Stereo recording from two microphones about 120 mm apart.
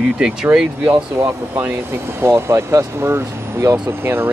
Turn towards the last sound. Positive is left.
turn(degrees=-20)  # may be behind; listen again after turning